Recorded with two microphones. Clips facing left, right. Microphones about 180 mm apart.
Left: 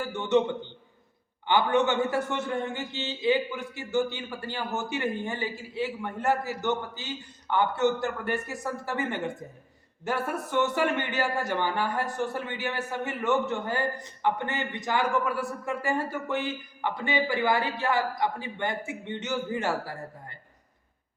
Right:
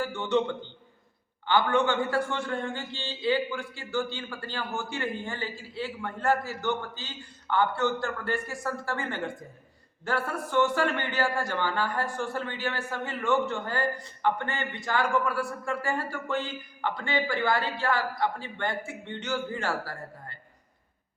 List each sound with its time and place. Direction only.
0.2 s a man's voice: 20° left (ahead or behind)
1.5 s a man's voice: 20° left (ahead or behind)